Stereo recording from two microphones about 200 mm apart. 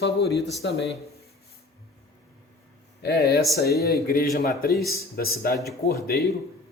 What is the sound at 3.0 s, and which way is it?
Speech, 55° left (ahead or behind).